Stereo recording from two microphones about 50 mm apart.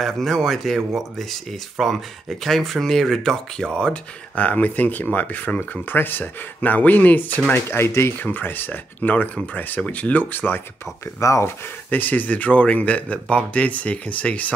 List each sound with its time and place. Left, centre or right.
0.0 s speech: centre
4.4 s speech: left
7.5 s speech: left
8.2 s speech: left
11.1 s speech: left
11.9 s speech: left